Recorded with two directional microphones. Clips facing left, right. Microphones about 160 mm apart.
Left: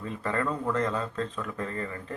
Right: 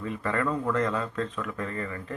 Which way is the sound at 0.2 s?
25° left (ahead or behind).